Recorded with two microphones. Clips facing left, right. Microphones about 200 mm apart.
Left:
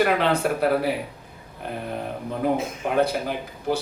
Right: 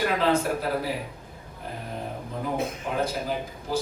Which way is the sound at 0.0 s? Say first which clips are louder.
Left 3 dB; 70° left (ahead or behind).